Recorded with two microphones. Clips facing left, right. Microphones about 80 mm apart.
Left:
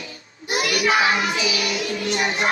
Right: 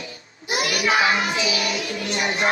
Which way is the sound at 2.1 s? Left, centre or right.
Left.